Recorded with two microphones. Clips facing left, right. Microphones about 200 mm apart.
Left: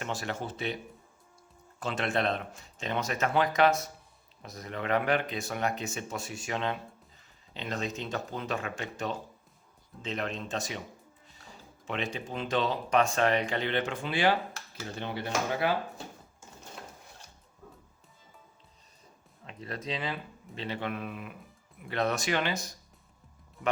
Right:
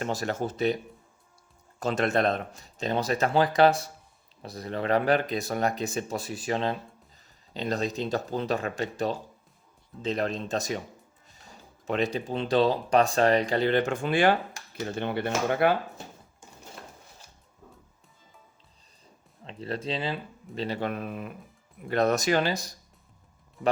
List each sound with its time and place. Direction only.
0.0 s speech: 40° right (ahead or behind)
1.8 s speech: 40° right (ahead or behind)
11.9 s speech: 40° right (ahead or behind); by 15.7 s 60° right (ahead or behind)
19.5 s speech: 30° right (ahead or behind)